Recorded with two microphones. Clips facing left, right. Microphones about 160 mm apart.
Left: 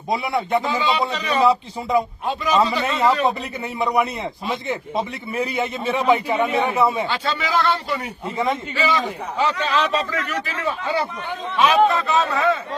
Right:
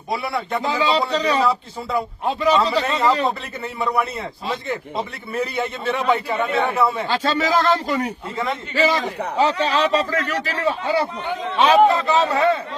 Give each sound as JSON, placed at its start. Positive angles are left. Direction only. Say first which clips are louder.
{"t": 0.1, "sound": "a man's voice", "louder": "left 3 dB", "side_deg": 20}
{"t": 0.6, "sound": "a man's voice", "louder": "right 1 dB", "side_deg": -40}
{"t": 1.5, "sound": "a man's voice", "louder": "left 3 dB", "side_deg": 15}
{"t": 2.7, "sound": "a man's voice", "louder": "even", "side_deg": -35}
{"t": 3.6, "sound": "a man's voice", "louder": "left 2 dB", "side_deg": 15}
{"t": 7.1, "sound": "a man's voice", "louder": "right 3 dB", "side_deg": -40}